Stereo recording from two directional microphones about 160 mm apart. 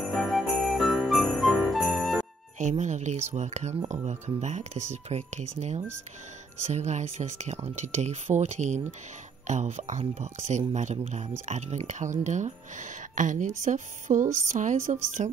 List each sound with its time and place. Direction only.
0.1 s jingle bell: centre (ahead or behind)
2.8 s speech: 45° right (ahead or behind)